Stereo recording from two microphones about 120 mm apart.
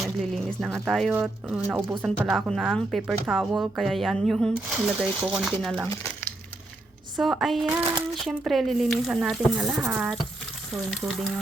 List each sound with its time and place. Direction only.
0.0 s speech: centre (ahead or behind)
5.9 s crumpling: 20° left (ahead or behind)
7.2 s speech: centre (ahead or behind)